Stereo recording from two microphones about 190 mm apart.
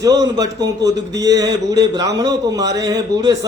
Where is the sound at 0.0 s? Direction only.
20° right (ahead or behind).